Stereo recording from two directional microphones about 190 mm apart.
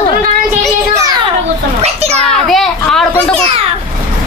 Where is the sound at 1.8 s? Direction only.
35° right (ahead or behind).